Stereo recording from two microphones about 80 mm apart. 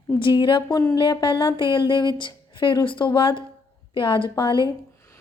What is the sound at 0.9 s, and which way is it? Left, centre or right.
A woman's voice, left.